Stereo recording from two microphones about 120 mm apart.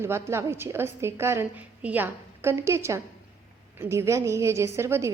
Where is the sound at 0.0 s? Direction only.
20° right (ahead or behind).